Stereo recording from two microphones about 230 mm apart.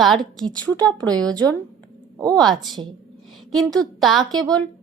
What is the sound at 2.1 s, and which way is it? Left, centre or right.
Speech, centre.